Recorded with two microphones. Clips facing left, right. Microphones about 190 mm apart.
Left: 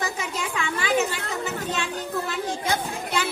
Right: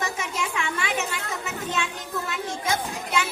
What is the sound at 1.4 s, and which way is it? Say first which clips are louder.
Child singing: even; 35° left (ahead or behind).